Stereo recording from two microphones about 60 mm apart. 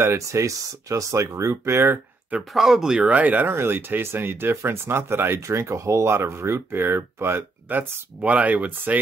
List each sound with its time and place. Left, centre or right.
0.3 s speech: right
2.5 s speech: centre
3.0 s speech: right
3.4 s speech: right
7.6 s speech: right